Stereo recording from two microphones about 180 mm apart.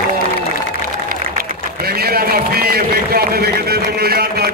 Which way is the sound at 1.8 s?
60° right (ahead or behind).